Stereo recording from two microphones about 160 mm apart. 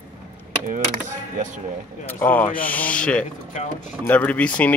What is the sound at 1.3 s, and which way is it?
Speech, 50° right (ahead or behind).